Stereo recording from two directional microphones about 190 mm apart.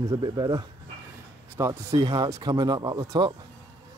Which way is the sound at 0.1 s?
20° right (ahead or behind).